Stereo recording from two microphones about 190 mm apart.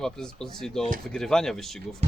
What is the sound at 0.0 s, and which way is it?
Speech, 5° left (ahead or behind).